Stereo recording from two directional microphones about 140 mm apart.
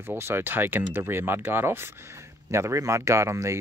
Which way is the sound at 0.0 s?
15° right (ahead or behind).